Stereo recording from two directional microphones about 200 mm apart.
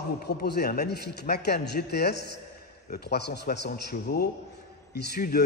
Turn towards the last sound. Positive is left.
turn(degrees=55)  # may be behind; listen again after turning